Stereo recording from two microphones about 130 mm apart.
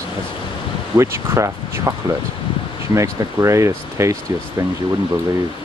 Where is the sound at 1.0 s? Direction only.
20° right (ahead or behind).